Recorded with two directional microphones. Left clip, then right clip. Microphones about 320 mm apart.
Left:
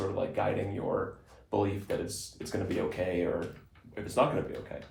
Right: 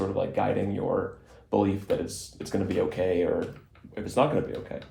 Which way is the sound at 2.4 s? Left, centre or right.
Right.